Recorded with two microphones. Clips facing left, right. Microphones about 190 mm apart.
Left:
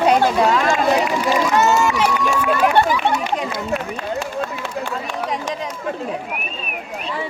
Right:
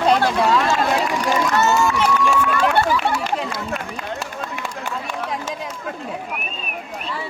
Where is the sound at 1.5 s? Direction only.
15° left (ahead or behind).